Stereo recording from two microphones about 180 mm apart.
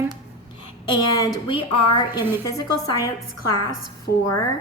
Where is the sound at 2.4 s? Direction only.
20° left (ahead or behind).